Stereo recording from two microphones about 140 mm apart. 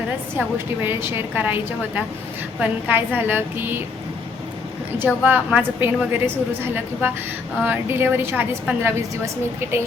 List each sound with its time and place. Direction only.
0.3 s a woman's voice: 15° right (ahead or behind)
4.9 s a woman's voice: 10° right (ahead or behind)